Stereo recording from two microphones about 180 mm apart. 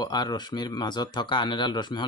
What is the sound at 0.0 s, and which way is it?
Speech, 25° left (ahead or behind).